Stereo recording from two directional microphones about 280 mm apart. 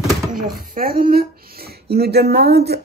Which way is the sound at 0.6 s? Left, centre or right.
Right.